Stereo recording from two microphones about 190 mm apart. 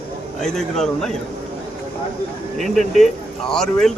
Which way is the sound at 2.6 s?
Centre (ahead or behind).